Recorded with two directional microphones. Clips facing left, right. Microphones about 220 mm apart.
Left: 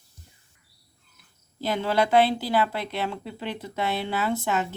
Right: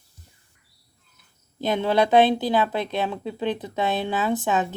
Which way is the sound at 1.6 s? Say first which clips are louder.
Right 3 dB; 20° right (ahead or behind).